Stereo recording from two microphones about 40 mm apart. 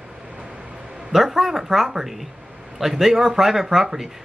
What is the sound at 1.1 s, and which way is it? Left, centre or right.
Speech, centre.